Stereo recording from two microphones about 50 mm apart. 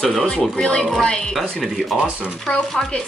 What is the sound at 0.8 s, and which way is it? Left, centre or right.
Chopping, centre.